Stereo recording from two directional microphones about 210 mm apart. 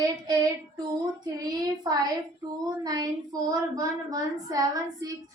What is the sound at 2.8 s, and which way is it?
Speech, 20° right (ahead or behind).